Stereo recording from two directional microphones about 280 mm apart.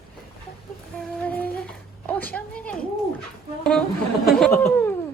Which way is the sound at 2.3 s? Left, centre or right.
Centre.